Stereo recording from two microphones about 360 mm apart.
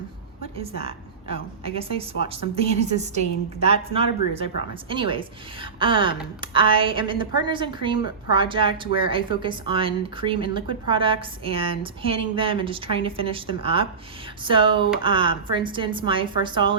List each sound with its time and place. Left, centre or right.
0.8 s speech: centre